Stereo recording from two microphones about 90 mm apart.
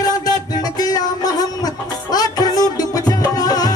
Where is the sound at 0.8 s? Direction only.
45° left (ahead or behind).